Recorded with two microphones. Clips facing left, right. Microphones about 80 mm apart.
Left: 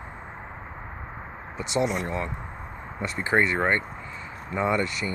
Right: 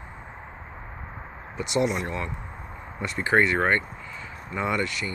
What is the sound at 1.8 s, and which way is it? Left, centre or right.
Speech, left.